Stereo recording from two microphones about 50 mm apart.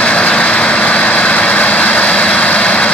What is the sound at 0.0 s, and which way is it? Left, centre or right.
Vehicle, left.